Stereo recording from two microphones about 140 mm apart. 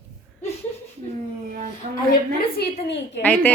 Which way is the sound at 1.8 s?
60° right (ahead or behind).